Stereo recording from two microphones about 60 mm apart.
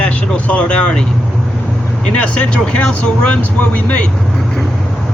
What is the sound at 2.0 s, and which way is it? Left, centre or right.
Speech, centre.